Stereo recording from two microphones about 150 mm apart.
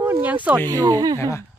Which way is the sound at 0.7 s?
25° right (ahead or behind).